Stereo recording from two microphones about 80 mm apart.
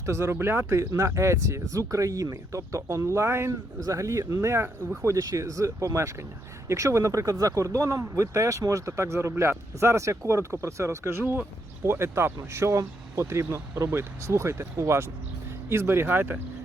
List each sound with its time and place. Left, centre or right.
0.0 s speech: right
0.8 s speech: right
5.0 s speech: right